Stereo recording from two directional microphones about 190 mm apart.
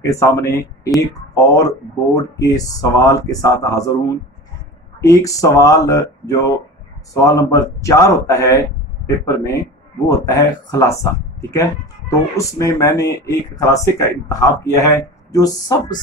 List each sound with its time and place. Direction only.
0.0 s speech: 15° left (ahead or behind)
5.0 s speech: 15° left (ahead or behind)